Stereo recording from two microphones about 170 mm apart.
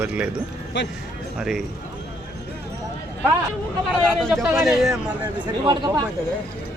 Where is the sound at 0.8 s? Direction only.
90° left.